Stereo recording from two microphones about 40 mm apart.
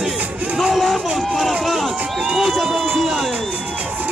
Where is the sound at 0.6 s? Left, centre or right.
Centre.